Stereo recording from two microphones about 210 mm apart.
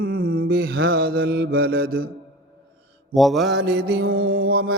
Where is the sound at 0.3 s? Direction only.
45° right (ahead or behind).